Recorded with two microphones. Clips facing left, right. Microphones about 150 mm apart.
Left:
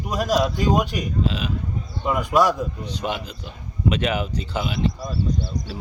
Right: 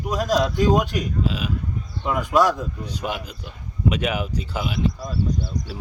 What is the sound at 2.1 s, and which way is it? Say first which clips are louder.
Speech: even; 15° left (ahead or behind).